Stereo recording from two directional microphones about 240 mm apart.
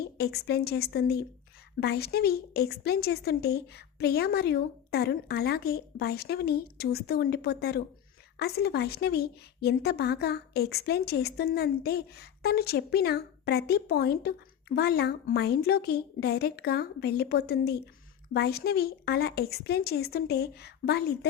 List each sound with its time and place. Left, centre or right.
0.2 s a woman's voice: left